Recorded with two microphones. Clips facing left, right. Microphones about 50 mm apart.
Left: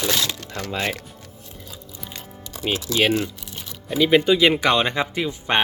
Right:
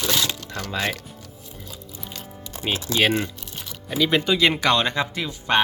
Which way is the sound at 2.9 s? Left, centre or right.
Right.